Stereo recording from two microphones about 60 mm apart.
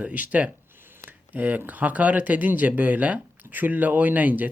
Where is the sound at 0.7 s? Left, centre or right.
Right.